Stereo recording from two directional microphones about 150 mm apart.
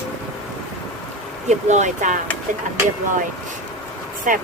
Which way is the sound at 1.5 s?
50° right (ahead or behind).